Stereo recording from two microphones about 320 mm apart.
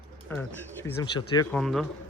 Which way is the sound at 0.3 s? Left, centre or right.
Centre.